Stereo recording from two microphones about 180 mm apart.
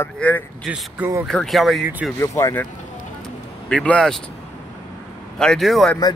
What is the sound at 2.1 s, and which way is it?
Speech, 15° left (ahead or behind).